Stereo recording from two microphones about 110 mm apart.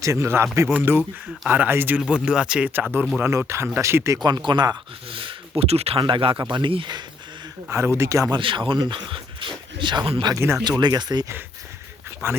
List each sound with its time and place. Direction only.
0.0 s speech: 25° right (ahead or behind)
4.2 s speech: 40° right (ahead or behind)
5.0 s speech: 50° right (ahead or behind); by 6.0 s 70° right (ahead or behind)
6.0 s speech: 45° right (ahead or behind)
7.7 s speech: 25° right (ahead or behind)
8.3 s speech: 50° right (ahead or behind)